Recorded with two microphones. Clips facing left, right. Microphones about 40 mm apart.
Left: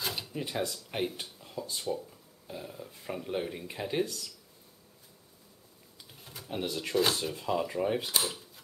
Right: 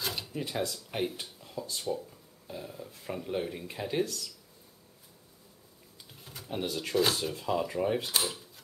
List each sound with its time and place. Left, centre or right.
0.0 s speech: centre
6.2 s pigeon: centre
6.7 s speech: centre